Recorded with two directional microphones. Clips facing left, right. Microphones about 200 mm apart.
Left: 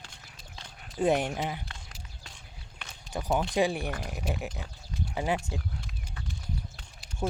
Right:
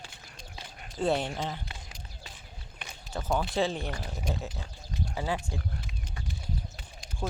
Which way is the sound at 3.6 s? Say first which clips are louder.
Left 2 dB; 15° left (ahead or behind).